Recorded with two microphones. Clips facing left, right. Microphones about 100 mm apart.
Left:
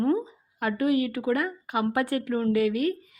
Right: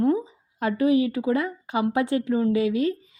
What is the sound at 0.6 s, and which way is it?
Speech, 25° right (ahead or behind).